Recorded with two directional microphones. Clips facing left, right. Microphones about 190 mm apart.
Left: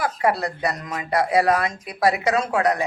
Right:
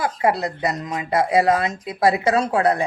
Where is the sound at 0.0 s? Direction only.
25° right (ahead or behind).